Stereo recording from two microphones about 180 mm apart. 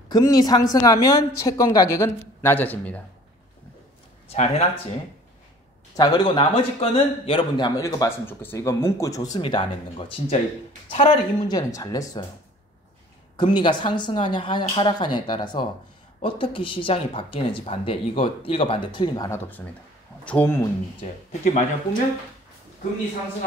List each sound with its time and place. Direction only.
0.1 s a man's voice: 20° left (ahead or behind)
4.3 s speech: 35° left (ahead or behind)
5.9 s a man's voice: 25° left (ahead or behind)
13.4 s a man's voice: 25° left (ahead or behind); by 20.6 s 10° left (ahead or behind)
21.0 s speech: 40° left (ahead or behind)